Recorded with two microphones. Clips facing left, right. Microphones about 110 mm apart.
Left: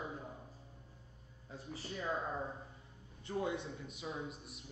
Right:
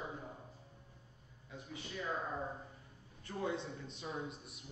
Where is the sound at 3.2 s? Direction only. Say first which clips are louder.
Left 3 dB; 20° left (ahead or behind).